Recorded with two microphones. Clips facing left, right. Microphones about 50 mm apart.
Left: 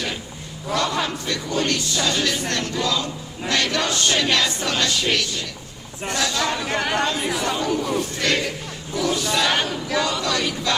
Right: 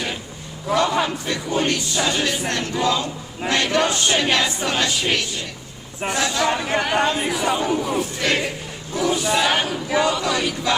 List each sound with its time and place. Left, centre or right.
0.7 s choir: centre
2.5 s speech: right
6.0 s choir: right
6.9 s speech: right
7.3 s choir: centre
7.5 s speech: right
7.8 s choir: centre
8.3 s choir: right